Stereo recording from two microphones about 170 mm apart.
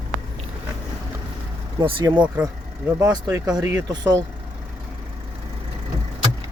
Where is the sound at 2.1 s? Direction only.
15° right (ahead or behind).